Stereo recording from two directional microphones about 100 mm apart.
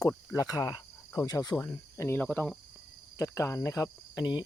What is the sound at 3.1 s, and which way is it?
Speech, 30° left (ahead or behind).